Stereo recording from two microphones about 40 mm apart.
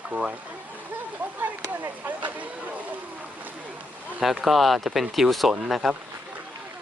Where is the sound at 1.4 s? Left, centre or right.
Right.